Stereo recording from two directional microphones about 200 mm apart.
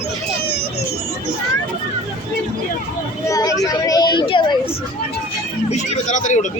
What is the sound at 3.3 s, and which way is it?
Speech, 15° left (ahead or behind).